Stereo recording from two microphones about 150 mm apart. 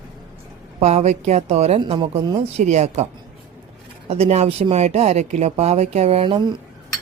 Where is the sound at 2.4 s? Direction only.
50° right (ahead or behind).